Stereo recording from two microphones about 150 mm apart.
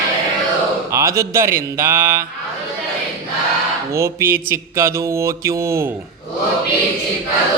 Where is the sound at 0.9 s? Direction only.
20° right (ahead or behind).